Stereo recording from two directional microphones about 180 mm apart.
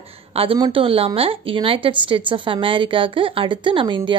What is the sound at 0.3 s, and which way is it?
A woman's voice, 30° right (ahead or behind).